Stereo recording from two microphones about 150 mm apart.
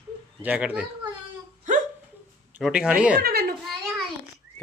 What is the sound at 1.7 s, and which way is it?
Hiccup, 60° right (ahead or behind).